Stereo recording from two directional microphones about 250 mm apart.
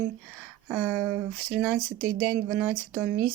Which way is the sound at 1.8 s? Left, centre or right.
Right.